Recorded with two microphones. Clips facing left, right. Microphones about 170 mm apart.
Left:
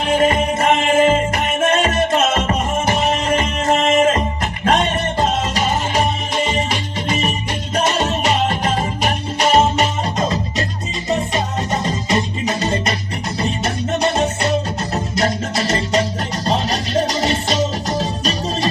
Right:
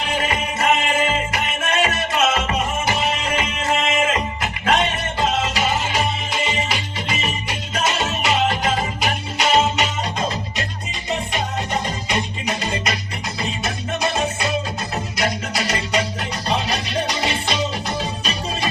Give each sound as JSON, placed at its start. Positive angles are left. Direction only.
{"t": 0.0, "sound": "music", "side_deg": 45}
{"t": 14.0, "sound": "music", "side_deg": 40}
{"t": 16.5, "sound": "music", "side_deg": 45}